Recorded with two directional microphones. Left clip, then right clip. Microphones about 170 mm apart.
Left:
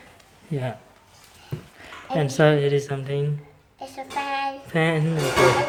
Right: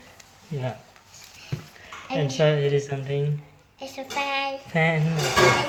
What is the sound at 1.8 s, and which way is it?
Speech, 55° left (ahead or behind).